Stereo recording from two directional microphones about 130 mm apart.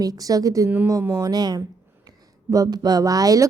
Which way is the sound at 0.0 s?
30° right (ahead or behind).